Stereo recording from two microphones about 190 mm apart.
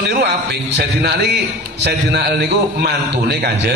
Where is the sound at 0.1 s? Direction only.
60° right (ahead or behind).